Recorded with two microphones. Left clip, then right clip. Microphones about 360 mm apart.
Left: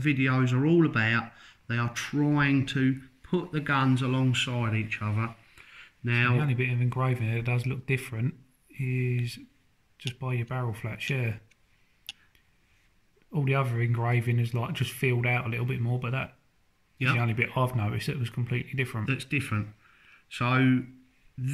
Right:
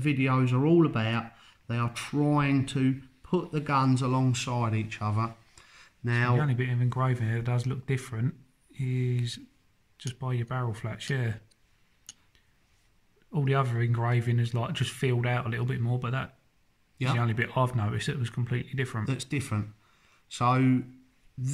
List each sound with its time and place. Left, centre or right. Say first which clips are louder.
0.0 s speech: left 1 dB; centre
5.8 s a sound: left 3 dB; centre
6.6 s speech: left 1 dB; centre
13.3 s speech: even; centre
17.4 s speech: even; centre
19.0 s speech: left 4 dB; centre